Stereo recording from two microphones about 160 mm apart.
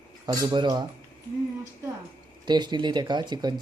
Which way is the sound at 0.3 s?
25° right (ahead or behind).